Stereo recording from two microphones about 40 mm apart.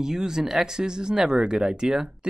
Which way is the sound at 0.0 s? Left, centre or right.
Centre.